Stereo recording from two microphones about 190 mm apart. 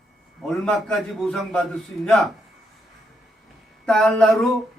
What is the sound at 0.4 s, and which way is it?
Speech, 5° left (ahead or behind).